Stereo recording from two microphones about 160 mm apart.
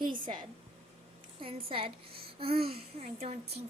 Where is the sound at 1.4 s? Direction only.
35° right (ahead or behind).